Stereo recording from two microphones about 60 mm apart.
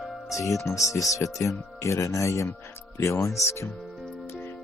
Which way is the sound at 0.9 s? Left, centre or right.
Left.